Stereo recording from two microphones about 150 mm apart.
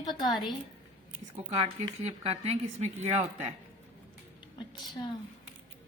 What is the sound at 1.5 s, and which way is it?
Speech, 40° right (ahead or behind).